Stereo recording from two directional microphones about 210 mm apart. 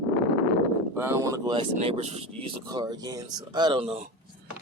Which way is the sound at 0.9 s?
10° right (ahead or behind).